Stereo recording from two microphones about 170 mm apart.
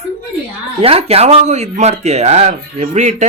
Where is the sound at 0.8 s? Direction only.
35° right (ahead or behind).